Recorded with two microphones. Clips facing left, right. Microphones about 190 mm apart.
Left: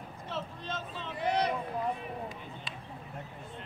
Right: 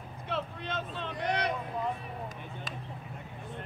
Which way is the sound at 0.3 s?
60° right (ahead or behind).